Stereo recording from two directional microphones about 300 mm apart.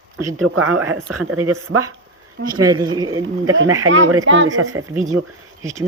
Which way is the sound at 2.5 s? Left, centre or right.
Centre.